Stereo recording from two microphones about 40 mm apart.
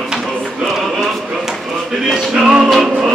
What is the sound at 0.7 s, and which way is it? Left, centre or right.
Chant, centre.